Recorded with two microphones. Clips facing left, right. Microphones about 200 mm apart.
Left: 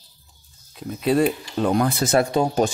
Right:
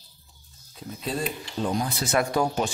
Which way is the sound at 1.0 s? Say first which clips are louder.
Left 11 dB; 70° left (ahead or behind).